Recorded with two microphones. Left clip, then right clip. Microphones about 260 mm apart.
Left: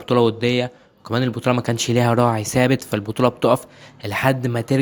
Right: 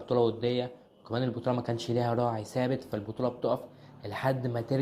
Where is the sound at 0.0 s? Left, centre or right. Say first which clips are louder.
Left 9 dB; left.